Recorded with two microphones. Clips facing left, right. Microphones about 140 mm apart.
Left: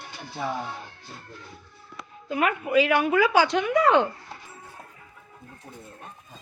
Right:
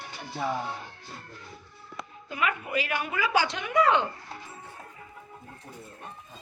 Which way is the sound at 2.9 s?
80° left.